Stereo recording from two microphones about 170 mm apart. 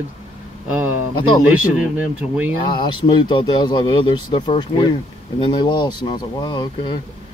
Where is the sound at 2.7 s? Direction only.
25° left (ahead or behind).